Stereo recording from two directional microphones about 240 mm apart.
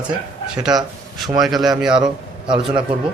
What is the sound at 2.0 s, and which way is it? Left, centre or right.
Speech, centre.